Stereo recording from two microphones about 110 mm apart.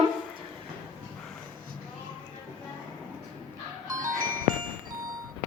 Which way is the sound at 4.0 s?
35° right (ahead or behind).